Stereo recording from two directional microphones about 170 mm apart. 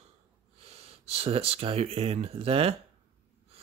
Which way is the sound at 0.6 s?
35° right (ahead or behind).